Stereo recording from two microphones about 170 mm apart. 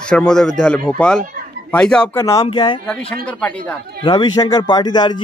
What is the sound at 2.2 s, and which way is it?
Speech, 20° left (ahead or behind).